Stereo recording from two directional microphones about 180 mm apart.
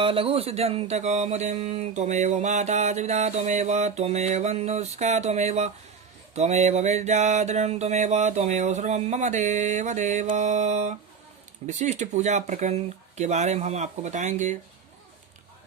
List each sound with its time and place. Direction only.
0.0 s mantra: 30° right (ahead or behind)